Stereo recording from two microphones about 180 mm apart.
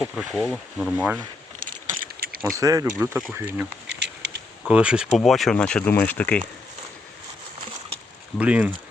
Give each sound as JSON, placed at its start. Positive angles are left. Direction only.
{"t": 0.2, "sound": "speech", "side_deg": 0}
{"t": 1.6, "sound": "a sound", "side_deg": -50}
{"t": 2.6, "sound": "speech", "side_deg": -20}
{"t": 3.8, "sound": "bee", "side_deg": -75}
{"t": 4.7, "sound": "speech", "side_deg": -5}
{"t": 8.4, "sound": "speech", "side_deg": -5}